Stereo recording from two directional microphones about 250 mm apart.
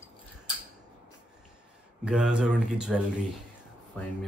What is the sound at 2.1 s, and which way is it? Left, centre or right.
Speech, centre.